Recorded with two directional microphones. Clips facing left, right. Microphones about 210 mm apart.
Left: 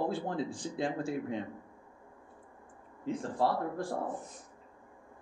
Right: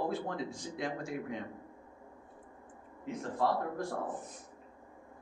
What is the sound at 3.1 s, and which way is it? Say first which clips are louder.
Speech: left 2 dB; 30° left (ahead or behind).